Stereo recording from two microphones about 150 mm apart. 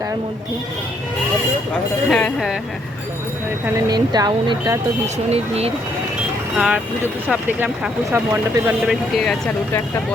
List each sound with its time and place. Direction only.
2.0 s speech: 5° left (ahead or behind)
3.8 s speech: 25° right (ahead or behind)
5.1 s speech: 45° right (ahead or behind)
6.6 s speech: 5° right (ahead or behind)
8.9 s speech: centre (ahead or behind)